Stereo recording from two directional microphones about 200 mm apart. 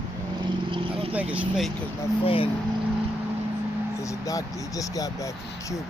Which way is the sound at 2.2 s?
25° left (ahead or behind).